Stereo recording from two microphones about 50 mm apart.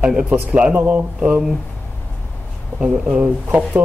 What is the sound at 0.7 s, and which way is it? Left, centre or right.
Speech, right.